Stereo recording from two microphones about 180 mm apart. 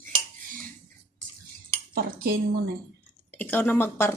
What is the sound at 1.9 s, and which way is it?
Dishes, 55° right (ahead or behind).